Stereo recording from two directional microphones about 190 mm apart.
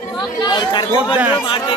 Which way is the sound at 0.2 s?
20° left (ahead or behind).